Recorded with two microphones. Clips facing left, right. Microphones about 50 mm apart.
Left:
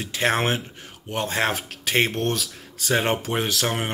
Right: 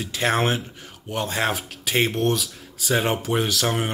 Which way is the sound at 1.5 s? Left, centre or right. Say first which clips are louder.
Even; left.